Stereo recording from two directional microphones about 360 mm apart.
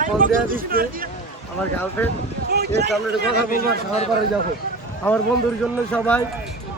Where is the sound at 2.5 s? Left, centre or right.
Right.